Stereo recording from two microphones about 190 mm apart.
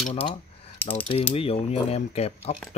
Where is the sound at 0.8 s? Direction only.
10° left (ahead or behind).